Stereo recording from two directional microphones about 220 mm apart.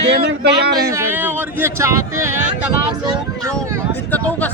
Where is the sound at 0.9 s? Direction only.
10° right (ahead or behind).